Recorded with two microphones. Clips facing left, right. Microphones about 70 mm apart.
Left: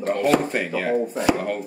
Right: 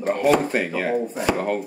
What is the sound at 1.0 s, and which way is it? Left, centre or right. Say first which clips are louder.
Speech: left 2 dB; centre.